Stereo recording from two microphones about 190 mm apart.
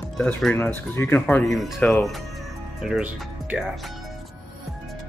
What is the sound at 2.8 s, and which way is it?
Speech, 5° right (ahead or behind).